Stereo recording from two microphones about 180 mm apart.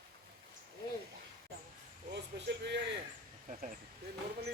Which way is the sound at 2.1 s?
70° right (ahead or behind).